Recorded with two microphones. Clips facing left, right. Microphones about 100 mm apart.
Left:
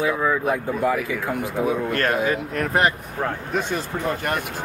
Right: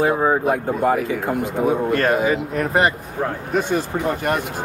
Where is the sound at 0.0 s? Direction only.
45° right (ahead or behind).